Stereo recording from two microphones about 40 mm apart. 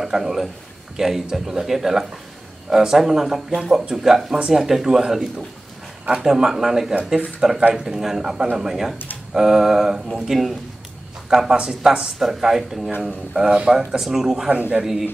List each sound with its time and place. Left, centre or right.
0.0 s a man's voice: centre
6.2 s speech: centre
8.9 s a sound: left
9.3 s speech: centre
11.2 s speech: centre
14.5 s speech: right
14.8 s speech: centre